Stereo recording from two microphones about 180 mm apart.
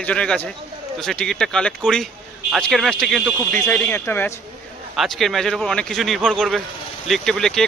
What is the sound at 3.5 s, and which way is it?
Speech, 10° left (ahead or behind).